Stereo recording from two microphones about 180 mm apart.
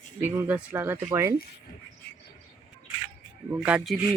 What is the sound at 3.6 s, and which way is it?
Speech, 5° right (ahead or behind).